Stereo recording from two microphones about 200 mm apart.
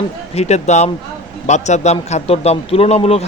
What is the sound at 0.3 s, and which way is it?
Speech, 35° left (ahead or behind).